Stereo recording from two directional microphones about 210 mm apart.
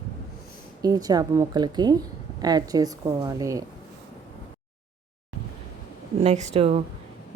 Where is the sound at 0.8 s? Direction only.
20° right (ahead or behind).